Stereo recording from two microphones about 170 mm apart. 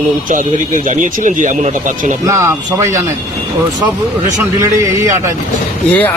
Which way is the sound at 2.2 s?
15° right (ahead or behind).